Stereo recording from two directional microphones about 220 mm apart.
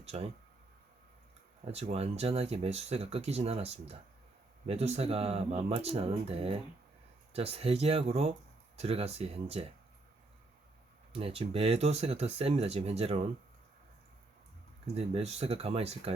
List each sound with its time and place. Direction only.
0.0 s speech: 30° right (ahead or behind)
1.6 s speech: 25° right (ahead or behind)
11.1 s speech: 25° right (ahead or behind)
14.9 s speech: 30° right (ahead or behind)